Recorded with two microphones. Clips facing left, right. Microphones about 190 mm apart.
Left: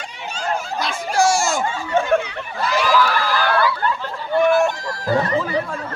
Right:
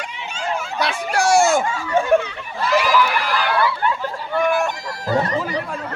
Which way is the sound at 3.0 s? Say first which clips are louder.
Left 1 dB; 20° right (ahead or behind).